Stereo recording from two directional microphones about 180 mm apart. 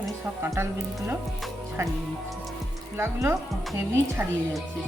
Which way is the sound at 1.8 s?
15° right (ahead or behind).